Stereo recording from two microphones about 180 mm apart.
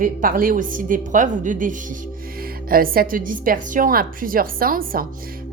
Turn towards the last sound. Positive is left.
turn(degrees=-50)  # may be behind; listen again after turning